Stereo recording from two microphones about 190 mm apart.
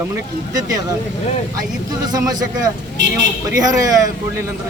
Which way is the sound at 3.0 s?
70° right (ahead or behind).